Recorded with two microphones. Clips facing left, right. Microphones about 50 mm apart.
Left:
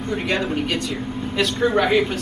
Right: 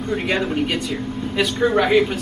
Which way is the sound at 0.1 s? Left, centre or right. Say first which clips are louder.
Right 1 dB; centre.